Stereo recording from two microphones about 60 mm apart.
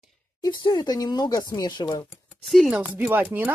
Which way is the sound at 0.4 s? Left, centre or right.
Left.